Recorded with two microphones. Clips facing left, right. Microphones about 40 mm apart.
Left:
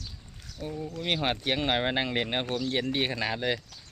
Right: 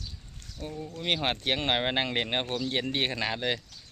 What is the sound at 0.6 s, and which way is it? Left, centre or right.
Speech, centre.